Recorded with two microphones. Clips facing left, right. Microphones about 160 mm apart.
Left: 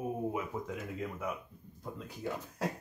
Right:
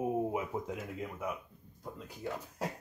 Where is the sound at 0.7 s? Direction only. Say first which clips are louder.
Left 1 dB; 10° right (ahead or behind).